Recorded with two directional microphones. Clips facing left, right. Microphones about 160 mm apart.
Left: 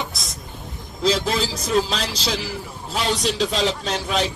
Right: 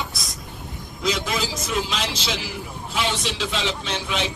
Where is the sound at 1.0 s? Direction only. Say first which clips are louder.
Left 4 dB; 30° left (ahead or behind).